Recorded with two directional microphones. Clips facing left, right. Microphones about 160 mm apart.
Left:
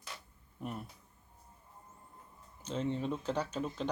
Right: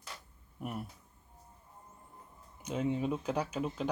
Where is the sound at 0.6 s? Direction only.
10° right (ahead or behind).